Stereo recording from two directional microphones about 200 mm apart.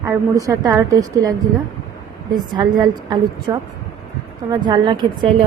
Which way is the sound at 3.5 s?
20° right (ahead or behind).